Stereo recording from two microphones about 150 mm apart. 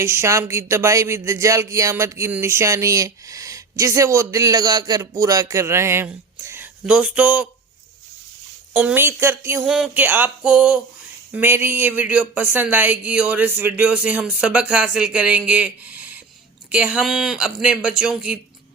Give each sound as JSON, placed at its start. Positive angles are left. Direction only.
{"t": 0.0, "sound": "speech", "side_deg": -20}
{"t": 8.7, "sound": "speech", "side_deg": -10}
{"t": 9.6, "sound": "speech", "side_deg": -5}